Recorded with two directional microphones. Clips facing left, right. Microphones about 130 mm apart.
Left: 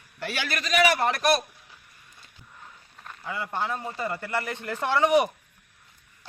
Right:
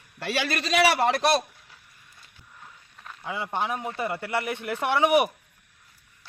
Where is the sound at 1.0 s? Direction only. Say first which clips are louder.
Right 1 dB; 30° right (ahead or behind).